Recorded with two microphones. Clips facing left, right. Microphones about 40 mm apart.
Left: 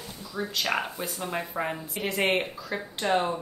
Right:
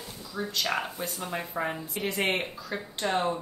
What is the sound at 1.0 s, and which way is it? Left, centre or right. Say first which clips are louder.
Speech: left 2 dB; centre.